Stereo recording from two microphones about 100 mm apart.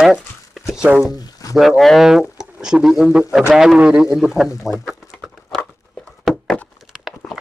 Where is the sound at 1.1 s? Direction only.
40° left (ahead or behind).